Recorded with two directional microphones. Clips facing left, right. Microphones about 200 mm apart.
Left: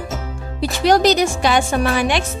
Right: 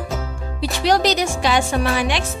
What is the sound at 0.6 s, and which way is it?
Speech, 50° left (ahead or behind).